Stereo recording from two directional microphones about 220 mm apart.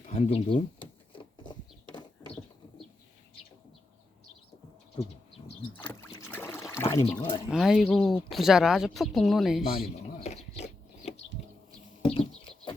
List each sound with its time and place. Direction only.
0.1 s a sound: 25° left (ahead or behind)
4.9 s bird: 20° left (ahead or behind)
5.8 s rowboat: 10° left (ahead or behind)
7.3 s speech: 20° left (ahead or behind)
7.5 s speech: centre (ahead or behind)
10.2 s a sound: 30° left (ahead or behind)